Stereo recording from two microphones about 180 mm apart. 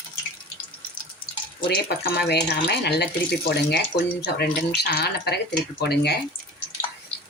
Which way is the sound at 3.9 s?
25° left (ahead or behind).